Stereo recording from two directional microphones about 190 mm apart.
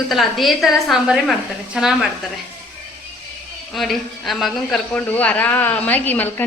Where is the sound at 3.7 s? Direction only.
Centre (ahead or behind).